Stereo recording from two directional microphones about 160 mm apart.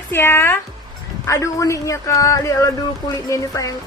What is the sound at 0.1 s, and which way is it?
A woman's voice, 15° left (ahead or behind).